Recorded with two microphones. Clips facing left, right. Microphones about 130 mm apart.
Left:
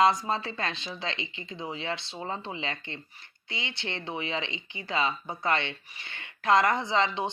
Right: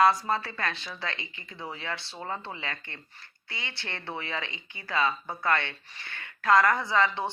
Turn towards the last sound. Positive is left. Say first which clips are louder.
# even
turn(degrees=20)  # may be behind; listen again after turning